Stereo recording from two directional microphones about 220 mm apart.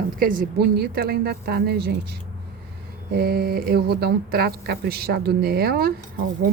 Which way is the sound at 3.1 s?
45° right (ahead or behind).